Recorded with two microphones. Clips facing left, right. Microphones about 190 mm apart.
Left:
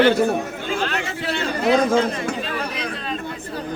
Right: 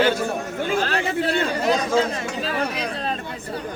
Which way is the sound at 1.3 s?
55° right (ahead or behind).